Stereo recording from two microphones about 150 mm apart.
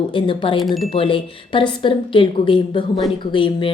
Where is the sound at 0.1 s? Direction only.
35° left (ahead or behind).